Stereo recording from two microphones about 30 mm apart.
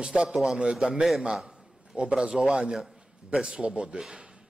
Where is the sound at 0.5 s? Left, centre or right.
Right.